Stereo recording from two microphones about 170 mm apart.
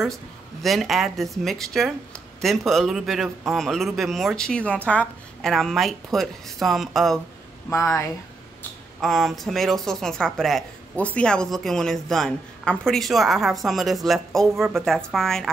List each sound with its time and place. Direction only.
0.0 s speech: centre (ahead or behind)
7.7 s speech: 15° left (ahead or behind)
9.0 s speech: centre (ahead or behind)